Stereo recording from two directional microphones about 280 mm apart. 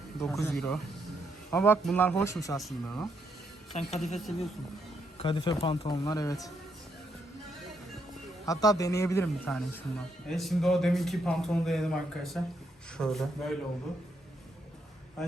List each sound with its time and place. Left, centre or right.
0.2 s a man's voice: centre
2.6 s a man's voice: centre
3.7 s a woman's voice: left
8.4 s a man's voice: centre